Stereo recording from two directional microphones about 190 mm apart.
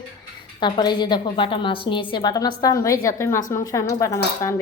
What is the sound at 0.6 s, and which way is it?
A woman's voice, 25° left (ahead or behind).